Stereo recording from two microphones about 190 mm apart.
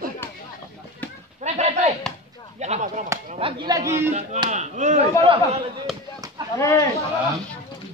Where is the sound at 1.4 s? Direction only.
35° right (ahead or behind).